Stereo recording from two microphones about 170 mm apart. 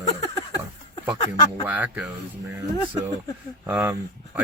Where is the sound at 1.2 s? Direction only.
25° left (ahead or behind).